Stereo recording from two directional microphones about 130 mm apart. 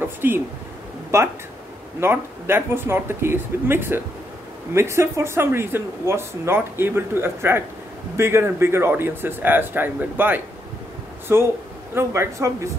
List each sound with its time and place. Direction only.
0.0 s speech: 15° right (ahead or behind)